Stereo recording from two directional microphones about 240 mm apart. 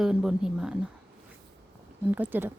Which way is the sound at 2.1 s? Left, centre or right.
Centre.